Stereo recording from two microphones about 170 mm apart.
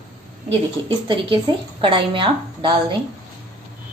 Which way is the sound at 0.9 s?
30° right (ahead or behind).